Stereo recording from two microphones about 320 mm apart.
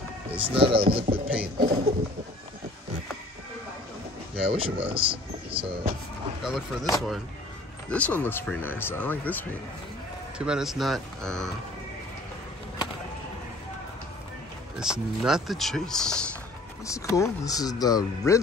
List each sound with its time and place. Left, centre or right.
0.6 s speech: centre
1.4 s a sound: right
4.5 s speech: centre
6.4 s speech: centre
7.9 s speech: centre
14.8 s speech: centre